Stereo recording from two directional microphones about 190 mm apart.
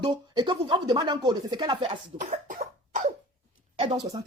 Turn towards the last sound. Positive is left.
turn(degrees=-30)  # may be behind; listen again after turning